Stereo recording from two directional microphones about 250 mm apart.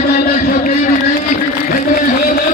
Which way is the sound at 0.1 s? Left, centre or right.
Left.